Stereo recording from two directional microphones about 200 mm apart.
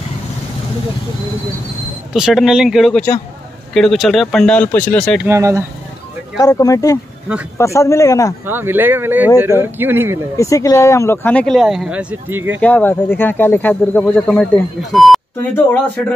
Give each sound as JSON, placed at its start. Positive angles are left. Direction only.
{"t": 2.1, "sound": "speech", "side_deg": 0}
{"t": 5.2, "sound": "speech", "side_deg": -15}
{"t": 6.4, "sound": "speech", "side_deg": 20}
{"t": 8.5, "sound": "speech", "side_deg": -10}
{"t": 10.3, "sound": "speech", "side_deg": 15}
{"t": 12.5, "sound": "speech", "side_deg": 5}